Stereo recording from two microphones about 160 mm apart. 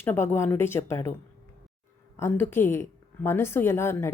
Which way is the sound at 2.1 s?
15° left (ahead or behind).